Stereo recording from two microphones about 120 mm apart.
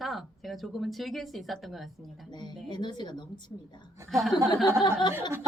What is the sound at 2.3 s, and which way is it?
Speech, 40° left (ahead or behind).